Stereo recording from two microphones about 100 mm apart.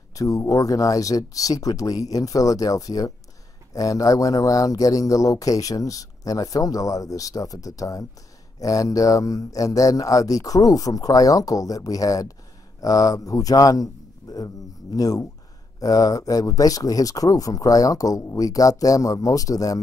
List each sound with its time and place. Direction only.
0.1 s speech: 35° left (ahead or behind)